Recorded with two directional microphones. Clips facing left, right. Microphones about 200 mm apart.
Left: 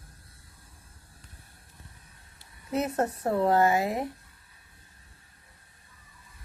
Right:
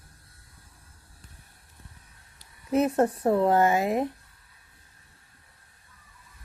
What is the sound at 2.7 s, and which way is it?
Speech, 20° right (ahead or behind).